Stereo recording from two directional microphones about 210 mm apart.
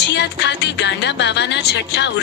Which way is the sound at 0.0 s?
55° left (ahead or behind).